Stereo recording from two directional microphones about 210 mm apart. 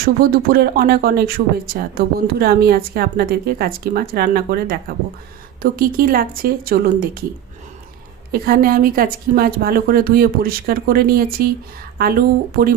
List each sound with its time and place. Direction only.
0.0 s speech: 45° right (ahead or behind)
8.3 s speech: 45° right (ahead or behind)